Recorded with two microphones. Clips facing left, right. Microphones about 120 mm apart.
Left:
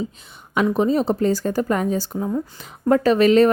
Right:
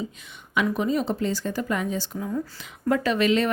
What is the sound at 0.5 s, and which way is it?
Speech, 35° left (ahead or behind).